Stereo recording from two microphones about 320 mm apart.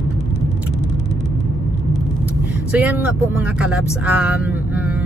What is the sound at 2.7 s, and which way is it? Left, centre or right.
Speech, centre.